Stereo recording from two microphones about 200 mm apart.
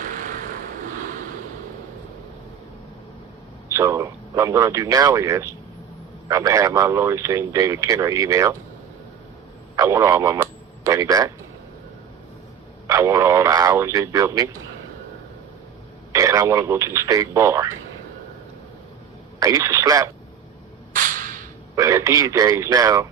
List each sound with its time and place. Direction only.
0.0 s vehicle: 40° right (ahead or behind)
3.7 s speech: 15° right (ahead or behind)
9.7 s telephone: 15° right (ahead or behind)
12.9 s radio: 15° right (ahead or behind)
16.1 s speech: 15° right (ahead or behind)
19.4 s speech: 15° right (ahead or behind)
20.9 s a sound: 40° right (ahead or behind)
21.8 s speech: 15° right (ahead or behind)